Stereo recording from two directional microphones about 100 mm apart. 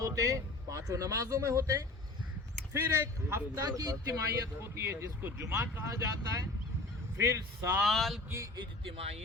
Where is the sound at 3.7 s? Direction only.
40° right (ahead or behind).